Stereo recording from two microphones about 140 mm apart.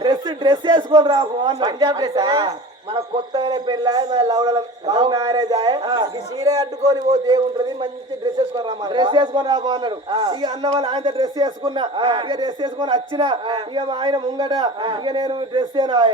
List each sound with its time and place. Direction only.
0.0 s a man's voice: 30° right (ahead or behind)